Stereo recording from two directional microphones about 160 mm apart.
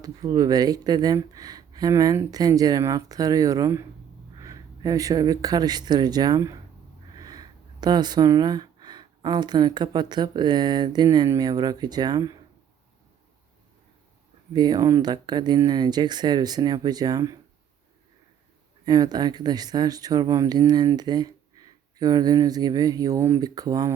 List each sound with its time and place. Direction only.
0.0 s speech: 20° right (ahead or behind)
14.5 s speech: 25° right (ahead or behind)
18.9 s speech: 25° right (ahead or behind)